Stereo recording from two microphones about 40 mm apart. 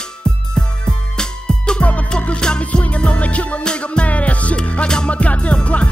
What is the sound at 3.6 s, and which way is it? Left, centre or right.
Music, left.